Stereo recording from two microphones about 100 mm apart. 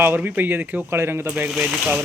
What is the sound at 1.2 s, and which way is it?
Speech, 15° right (ahead or behind).